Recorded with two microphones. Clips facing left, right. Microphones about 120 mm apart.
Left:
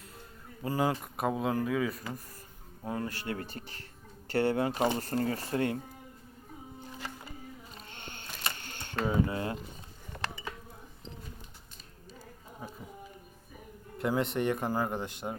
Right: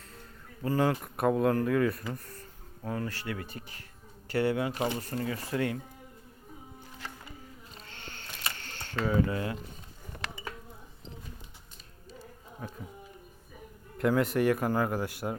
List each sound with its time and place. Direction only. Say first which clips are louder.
0.6 s speech: right 2 dB; 15° left (ahead or behind)
2.8 s speech: right 1 dB; 20° left (ahead or behind)
3.2 s speech: left 1 dB; 30° left (ahead or behind)
7.9 s camera: even; 20° left (ahead or behind)
14.0 s speech: right 4 dB; centre (ahead or behind)
14.9 s speech: right 3 dB; 5° right (ahead or behind)